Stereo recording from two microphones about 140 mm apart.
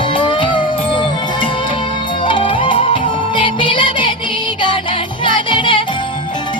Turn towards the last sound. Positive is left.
turn(degrees=35)  # may be behind; listen again after turning